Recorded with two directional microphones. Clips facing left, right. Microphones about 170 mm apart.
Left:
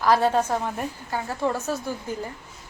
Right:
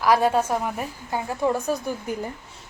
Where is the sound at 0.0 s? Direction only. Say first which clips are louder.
Right 1 dB; 10° right (ahead or behind).